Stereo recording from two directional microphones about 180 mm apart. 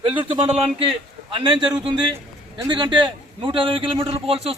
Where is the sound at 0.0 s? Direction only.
30° right (ahead or behind).